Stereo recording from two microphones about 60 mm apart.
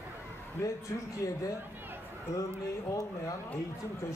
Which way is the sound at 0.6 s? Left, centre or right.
Left.